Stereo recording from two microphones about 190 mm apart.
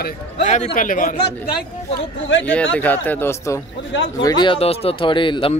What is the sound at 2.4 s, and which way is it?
Speech, 5° left (ahead or behind).